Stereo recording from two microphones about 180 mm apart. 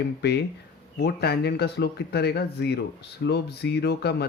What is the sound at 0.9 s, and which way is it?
Speech, 65° left (ahead or behind).